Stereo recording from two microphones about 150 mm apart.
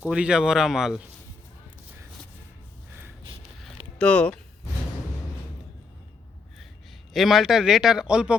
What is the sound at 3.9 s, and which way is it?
Speech, 5° left (ahead or behind).